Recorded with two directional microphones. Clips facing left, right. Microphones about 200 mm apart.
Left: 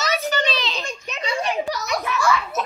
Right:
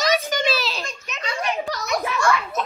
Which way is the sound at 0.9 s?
30° left (ahead or behind).